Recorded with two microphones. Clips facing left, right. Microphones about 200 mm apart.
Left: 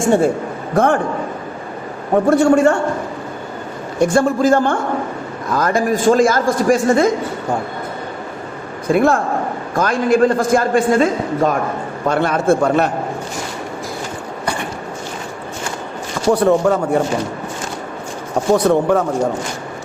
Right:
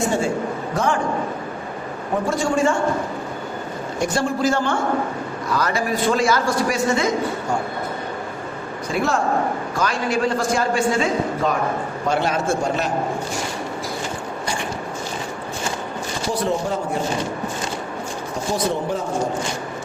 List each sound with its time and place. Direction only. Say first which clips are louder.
0.0 s a man's voice: left 6 dB; 55° left (ahead or behind)
2.2 s a man's voice: left 8 dB; 65° left (ahead or behind)
4.0 s a man's voice: left 7 dB; 50° left (ahead or behind)
8.9 s a man's voice: left 6 dB; 55° left (ahead or behind)
16.3 s a man's voice: left 10 dB; 60° left (ahead or behind)
18.5 s a man's voice: left 10 dB; 60° left (ahead or behind)